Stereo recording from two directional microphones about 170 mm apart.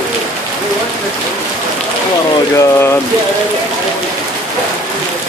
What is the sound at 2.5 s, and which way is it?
Speech, 15° left (ahead or behind).